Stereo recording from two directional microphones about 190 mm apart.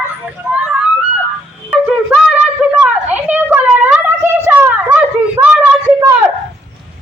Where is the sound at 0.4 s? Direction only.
5° right (ahead or behind).